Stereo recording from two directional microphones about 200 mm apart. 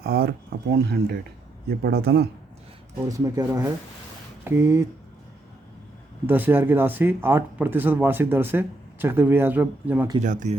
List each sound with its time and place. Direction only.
0.0 s speech: 50° right (ahead or behind)
3.1 s speech: 15° right (ahead or behind)
6.2 s speech: 10° right (ahead or behind)
10.2 s speech: 40° right (ahead or behind)